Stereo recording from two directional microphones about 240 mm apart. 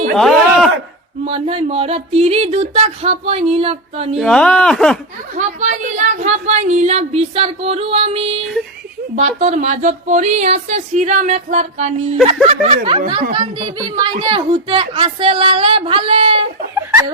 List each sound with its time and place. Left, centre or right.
1.2 s a woman's voice: right
4.2 s speech: centre
5.3 s a woman's voice: right